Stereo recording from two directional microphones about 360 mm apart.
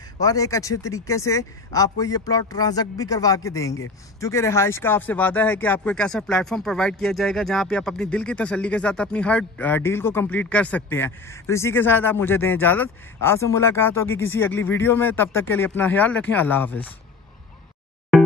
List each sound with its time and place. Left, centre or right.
0.2 s speech: centre
18.1 s music: centre